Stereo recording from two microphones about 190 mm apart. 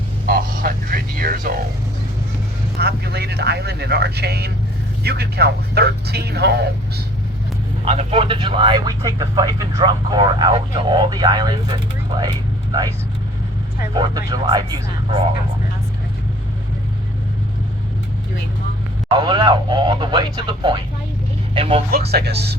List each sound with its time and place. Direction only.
0.3 s music: 50° right (ahead or behind)
2.7 s speech: 60° right (ahead or behind)
7.9 s speech: 30° right (ahead or behind)
13.9 s speech: 20° right (ahead or behind)
19.1 s speech: 25° right (ahead or behind)
21.9 s speech: 55° right (ahead or behind)